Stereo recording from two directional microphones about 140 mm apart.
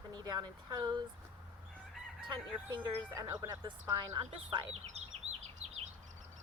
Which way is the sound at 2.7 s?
25° right (ahead or behind).